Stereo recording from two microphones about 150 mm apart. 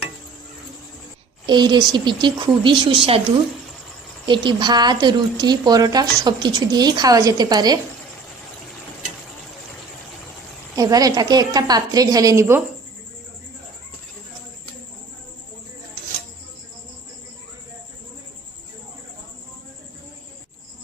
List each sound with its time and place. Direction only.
1.5 s speech: 30° right (ahead or behind)
4.3 s speech: 30° right (ahead or behind)
10.8 s speech: 25° right (ahead or behind)